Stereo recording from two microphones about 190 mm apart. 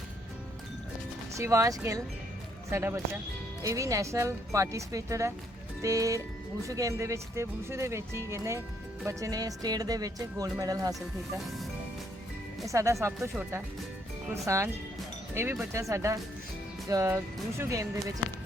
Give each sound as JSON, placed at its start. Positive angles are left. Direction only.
{"t": 1.4, "sound": "speech", "side_deg": -15}
{"t": 12.6, "sound": "speech", "side_deg": -15}
{"t": 15.7, "sound": "speech", "side_deg": -15}